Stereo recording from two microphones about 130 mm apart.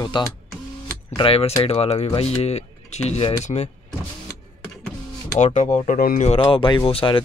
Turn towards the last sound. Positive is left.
turn(degrees=45)  # may be behind; listen again after turning